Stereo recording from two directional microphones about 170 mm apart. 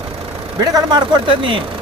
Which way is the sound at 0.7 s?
25° right (ahead or behind).